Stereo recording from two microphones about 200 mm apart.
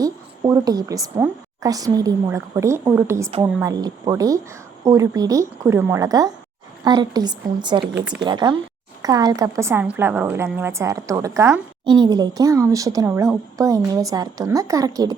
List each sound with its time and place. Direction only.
0.0 s a woman's voice: 15° right (ahead or behind)
7.9 s speech: 5° right (ahead or behind)
8.2 s a woman's voice: 20° right (ahead or behind)